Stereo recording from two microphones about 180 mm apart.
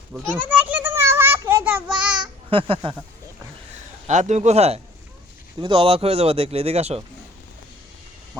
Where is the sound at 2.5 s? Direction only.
30° right (ahead or behind).